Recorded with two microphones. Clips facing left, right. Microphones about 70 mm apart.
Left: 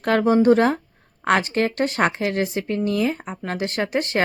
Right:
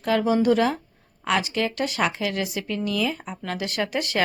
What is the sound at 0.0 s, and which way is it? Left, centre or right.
Speech, left.